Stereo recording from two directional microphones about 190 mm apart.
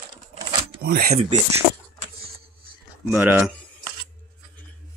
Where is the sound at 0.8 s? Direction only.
50° right (ahead or behind).